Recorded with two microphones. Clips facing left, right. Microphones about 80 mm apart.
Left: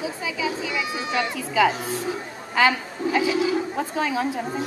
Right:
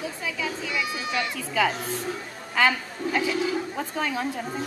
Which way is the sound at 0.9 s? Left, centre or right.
Left.